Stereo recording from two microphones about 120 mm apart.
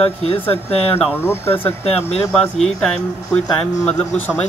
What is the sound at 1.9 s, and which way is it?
Speech, 60° left (ahead or behind).